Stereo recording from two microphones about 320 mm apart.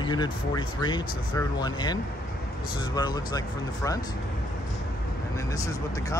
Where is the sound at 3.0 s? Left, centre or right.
Centre.